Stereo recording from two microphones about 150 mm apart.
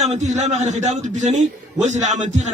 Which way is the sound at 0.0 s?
50° right (ahead or behind).